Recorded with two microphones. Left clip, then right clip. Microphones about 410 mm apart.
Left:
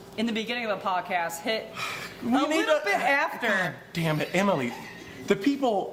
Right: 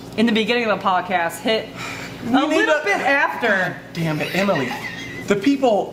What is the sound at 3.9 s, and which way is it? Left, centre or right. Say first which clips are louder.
Speech: right 4 dB; left.